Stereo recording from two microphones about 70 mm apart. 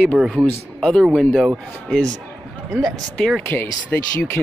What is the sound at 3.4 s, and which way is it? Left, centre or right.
Speech, left.